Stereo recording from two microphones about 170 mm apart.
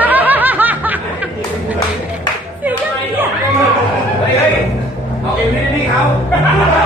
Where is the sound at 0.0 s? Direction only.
10° right (ahead or behind).